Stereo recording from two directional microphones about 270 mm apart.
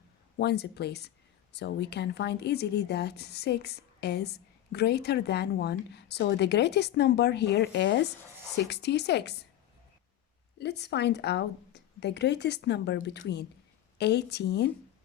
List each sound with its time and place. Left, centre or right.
0.3 s speech: left
10.6 s speech: left